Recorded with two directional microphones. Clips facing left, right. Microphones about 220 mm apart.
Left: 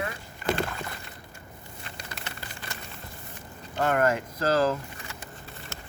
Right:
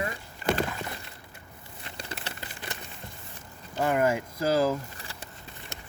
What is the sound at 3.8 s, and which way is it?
Speech, 10° right (ahead or behind).